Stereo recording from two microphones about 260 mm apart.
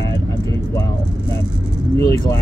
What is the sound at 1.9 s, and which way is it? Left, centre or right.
Speech, centre.